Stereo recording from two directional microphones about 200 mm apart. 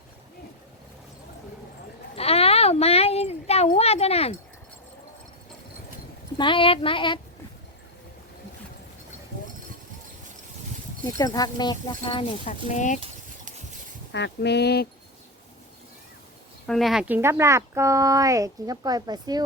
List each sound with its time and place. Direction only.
2.1 s a sound: 30° left (ahead or behind)
6.3 s speech: 25° left (ahead or behind)
11.2 s speech: 20° left (ahead or behind)
12.5 s speech: 35° left (ahead or behind)
13.0 s a sound: 40° right (ahead or behind)
14.1 s speech: 60° left (ahead or behind)
16.6 s speech: centre (ahead or behind); by 19.5 s 20° right (ahead or behind)